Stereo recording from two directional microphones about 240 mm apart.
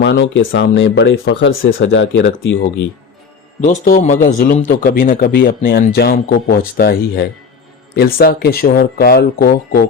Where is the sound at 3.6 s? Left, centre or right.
Left.